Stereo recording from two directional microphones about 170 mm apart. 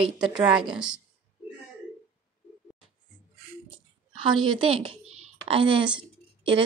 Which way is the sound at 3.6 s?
30° right (ahead or behind).